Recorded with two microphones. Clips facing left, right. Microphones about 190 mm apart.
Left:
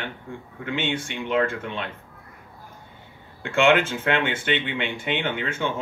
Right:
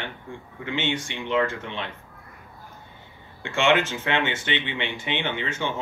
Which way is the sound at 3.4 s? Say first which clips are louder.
Left 2 dB; 55° left (ahead or behind).